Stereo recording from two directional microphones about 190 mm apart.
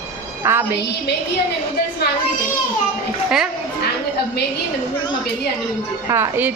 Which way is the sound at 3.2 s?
5° right (ahead or behind).